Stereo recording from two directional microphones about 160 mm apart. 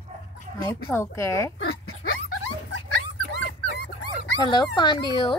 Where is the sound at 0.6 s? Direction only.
15° left (ahead or behind).